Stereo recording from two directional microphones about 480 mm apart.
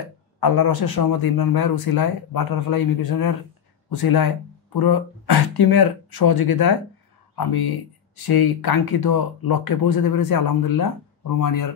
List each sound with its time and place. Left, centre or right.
0.7 s speech: left